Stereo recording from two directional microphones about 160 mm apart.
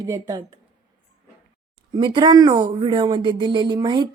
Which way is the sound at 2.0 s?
30° right (ahead or behind).